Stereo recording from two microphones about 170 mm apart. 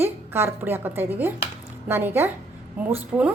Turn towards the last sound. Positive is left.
turn(degrees=-5)  # may be behind; listen again after turning